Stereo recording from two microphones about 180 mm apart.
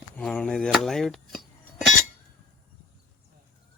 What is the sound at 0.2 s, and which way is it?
Speech, 5° left (ahead or behind).